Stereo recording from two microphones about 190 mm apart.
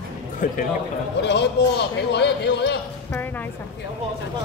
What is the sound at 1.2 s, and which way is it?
A man's voice, 65° left (ahead or behind).